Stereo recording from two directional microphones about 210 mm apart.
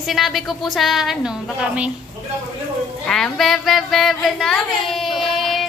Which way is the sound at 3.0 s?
5° left (ahead or behind).